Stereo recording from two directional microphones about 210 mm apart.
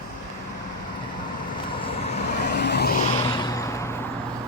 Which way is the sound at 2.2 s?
50° left (ahead or behind).